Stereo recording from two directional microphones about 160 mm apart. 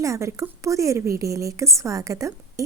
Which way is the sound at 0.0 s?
20° right (ahead or behind).